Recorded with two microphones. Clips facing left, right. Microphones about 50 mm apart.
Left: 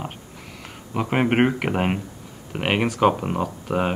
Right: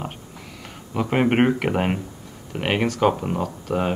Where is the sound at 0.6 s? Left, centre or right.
Centre.